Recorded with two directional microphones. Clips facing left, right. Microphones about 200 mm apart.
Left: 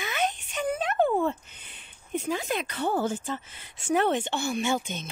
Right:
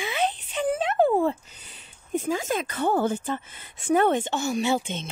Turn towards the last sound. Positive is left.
turn(degrees=-30)  # may be behind; listen again after turning